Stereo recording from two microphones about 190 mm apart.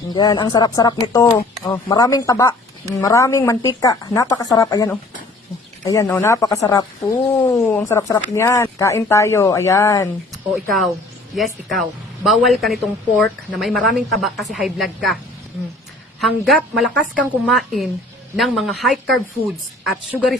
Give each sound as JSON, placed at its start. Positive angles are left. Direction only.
{"t": 0.1, "sound": "speech", "side_deg": 20}
{"t": 10.5, "sound": "a woman's voice", "side_deg": 0}
{"t": 16.2, "sound": "a woman's voice", "side_deg": 0}